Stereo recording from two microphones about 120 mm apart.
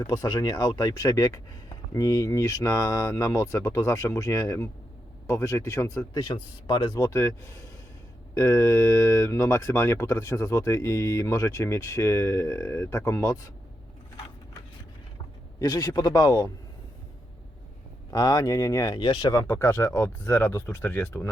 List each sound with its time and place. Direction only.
0.0 s speech: 30° left (ahead or behind)
6.1 s speech: 40° left (ahead or behind)
15.5 s speech: 35° left (ahead or behind)
18.1 s speech: 30° left (ahead or behind)
19.5 s speech: 20° left (ahead or behind)